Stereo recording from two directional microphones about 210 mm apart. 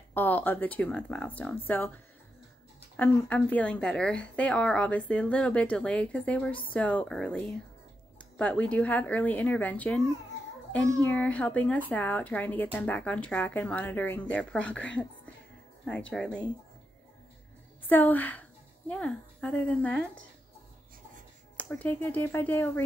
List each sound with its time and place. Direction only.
0.1 s speech: 10° left (ahead or behind)
3.0 s a woman's voice: 5° left (ahead or behind)
17.8 s a woman's voice: 10° left (ahead or behind)
21.5 s speech: 5° left (ahead or behind)